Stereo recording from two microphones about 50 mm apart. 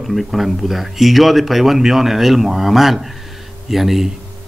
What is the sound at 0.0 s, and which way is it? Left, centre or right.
Speech, centre.